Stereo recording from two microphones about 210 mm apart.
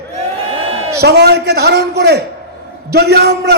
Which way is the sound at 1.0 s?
50° right (ahead or behind).